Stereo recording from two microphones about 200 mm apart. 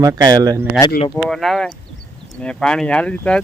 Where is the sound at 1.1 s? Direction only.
Centre (ahead or behind).